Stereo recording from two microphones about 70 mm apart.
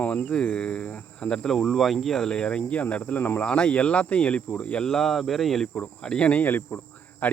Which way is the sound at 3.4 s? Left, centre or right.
Centre.